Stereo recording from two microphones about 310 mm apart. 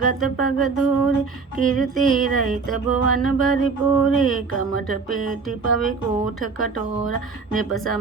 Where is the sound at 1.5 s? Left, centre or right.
Right.